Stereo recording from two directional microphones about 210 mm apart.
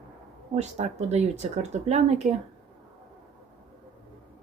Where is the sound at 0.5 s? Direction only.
35° right (ahead or behind).